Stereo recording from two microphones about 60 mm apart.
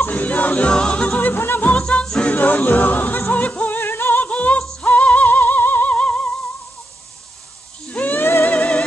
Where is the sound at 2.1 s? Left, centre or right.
Centre.